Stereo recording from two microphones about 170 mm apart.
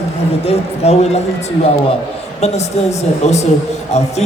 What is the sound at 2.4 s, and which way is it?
A woman's voice, 40° left (ahead or behind).